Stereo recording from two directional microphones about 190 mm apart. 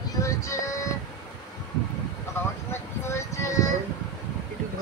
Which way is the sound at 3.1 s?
15° left (ahead or behind).